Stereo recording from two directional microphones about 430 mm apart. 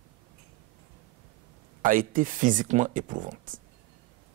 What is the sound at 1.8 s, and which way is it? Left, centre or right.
Speech, centre.